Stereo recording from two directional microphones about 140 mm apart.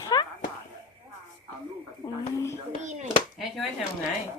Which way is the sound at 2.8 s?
60° right (ahead or behind).